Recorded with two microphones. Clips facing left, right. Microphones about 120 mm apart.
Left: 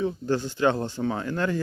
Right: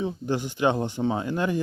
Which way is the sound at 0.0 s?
15° right (ahead or behind).